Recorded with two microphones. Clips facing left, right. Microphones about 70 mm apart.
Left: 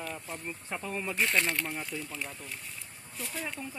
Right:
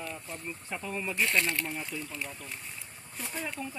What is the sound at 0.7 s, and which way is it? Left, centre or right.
Speech, left.